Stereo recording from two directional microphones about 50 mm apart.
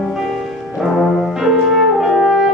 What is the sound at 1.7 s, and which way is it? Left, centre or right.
French horn, centre.